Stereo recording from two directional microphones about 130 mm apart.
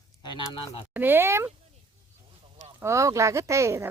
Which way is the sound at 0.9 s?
15° right (ahead or behind).